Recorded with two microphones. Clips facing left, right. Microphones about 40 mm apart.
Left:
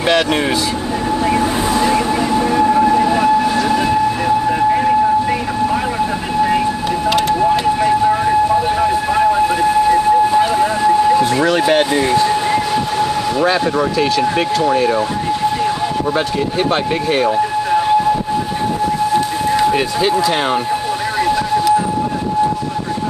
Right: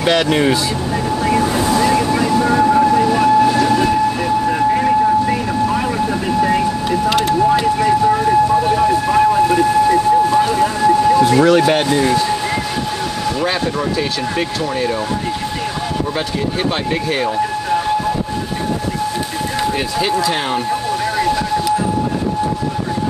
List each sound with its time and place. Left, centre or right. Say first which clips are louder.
3.2 s train: right 1 dB; centre
4.5 s vehicle: right 1 dB; centre
7.1 s siren: left 1 dB; centre
11.1 s a sound: right 2 dB; centre
11.5 s speech: even; centre
14.3 s speech: left 5 dB; centre
17.1 s a sound: left 5 dB; centre
19.7 s speech: left 3 dB; centre
21.2 s vehicle: left 4 dB; centre